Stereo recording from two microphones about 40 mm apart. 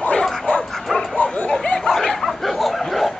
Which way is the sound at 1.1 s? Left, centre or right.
Left.